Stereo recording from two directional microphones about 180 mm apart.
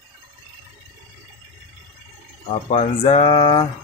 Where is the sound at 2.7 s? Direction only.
35° left (ahead or behind).